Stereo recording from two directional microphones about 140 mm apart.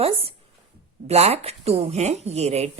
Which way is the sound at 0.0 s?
45° right (ahead or behind).